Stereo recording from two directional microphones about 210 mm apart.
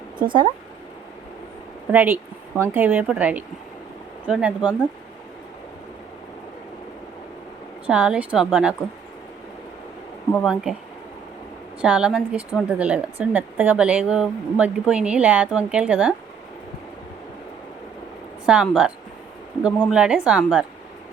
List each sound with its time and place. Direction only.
0.2 s speech: 25° right (ahead or behind)
1.9 s a woman's voice: 10° right (ahead or behind)
7.9 s speech: 5° right (ahead or behind)
10.3 s speech: centre (ahead or behind)
11.8 s speech: 5° right (ahead or behind)
18.4 s speech: 5° right (ahead or behind)